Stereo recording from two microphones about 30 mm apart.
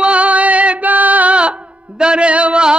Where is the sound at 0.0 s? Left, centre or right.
Right.